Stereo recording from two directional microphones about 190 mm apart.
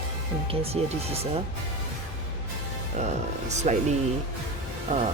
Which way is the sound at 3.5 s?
35° right (ahead or behind).